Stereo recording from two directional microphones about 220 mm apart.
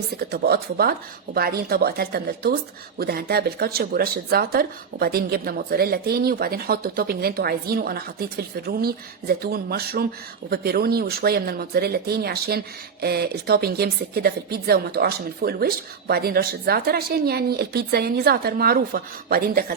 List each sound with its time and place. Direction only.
0.2 s speech: 45° right (ahead or behind)